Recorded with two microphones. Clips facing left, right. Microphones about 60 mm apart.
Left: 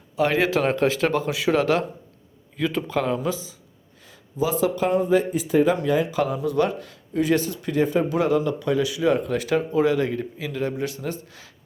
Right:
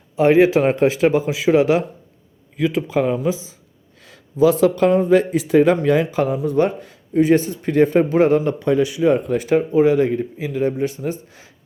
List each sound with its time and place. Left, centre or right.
0.2 s speech: right
4.0 s speech: right